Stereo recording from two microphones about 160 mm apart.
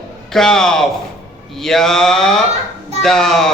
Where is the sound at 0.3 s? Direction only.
5° left (ahead or behind).